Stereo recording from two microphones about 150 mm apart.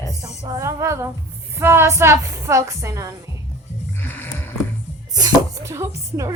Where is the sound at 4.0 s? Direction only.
15° left (ahead or behind).